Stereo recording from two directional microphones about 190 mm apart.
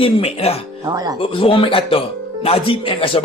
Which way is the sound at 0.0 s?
30° left (ahead or behind).